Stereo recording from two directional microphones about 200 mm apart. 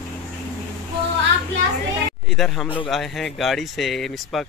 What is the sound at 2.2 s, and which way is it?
Speech, centre (ahead or behind).